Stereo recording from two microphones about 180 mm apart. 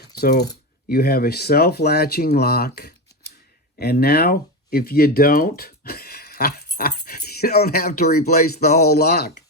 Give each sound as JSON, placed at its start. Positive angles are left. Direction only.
{"t": 0.2, "sound": "speech", "side_deg": 65}